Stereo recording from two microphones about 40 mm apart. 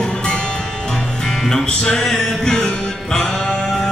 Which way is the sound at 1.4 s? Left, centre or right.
Centre.